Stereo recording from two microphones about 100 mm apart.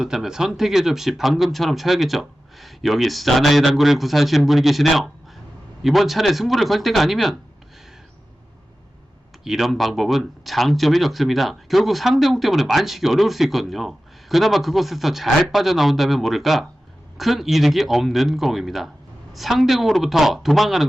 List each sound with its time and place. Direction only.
0.0 s speech: 5° right (ahead or behind)
9.4 s speech: 5° right (ahead or behind)